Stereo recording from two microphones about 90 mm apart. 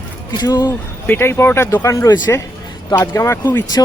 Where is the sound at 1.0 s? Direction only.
25° left (ahead or behind).